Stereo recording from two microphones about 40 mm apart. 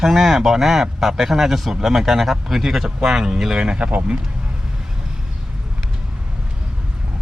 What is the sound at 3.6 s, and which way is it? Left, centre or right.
Speech, right.